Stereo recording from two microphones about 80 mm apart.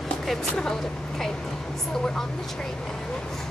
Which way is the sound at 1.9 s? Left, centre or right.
Centre.